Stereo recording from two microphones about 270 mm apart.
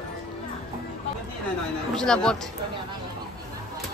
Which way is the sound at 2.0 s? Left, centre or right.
Centre.